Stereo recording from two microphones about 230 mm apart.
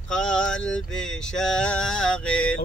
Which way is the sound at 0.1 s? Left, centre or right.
Centre.